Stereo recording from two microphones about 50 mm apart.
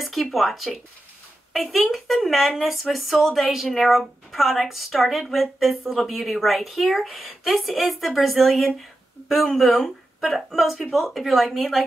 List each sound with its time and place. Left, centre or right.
0.0 s speech: centre